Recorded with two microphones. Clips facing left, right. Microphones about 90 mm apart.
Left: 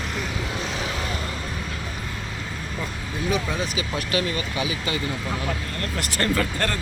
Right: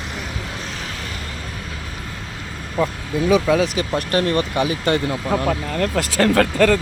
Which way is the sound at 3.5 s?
90° right.